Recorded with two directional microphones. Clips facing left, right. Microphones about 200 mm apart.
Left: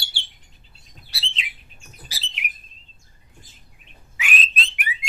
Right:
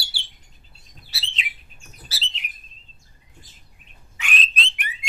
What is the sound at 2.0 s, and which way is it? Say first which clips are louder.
Bird: right 1 dB; 15° left (ahead or behind).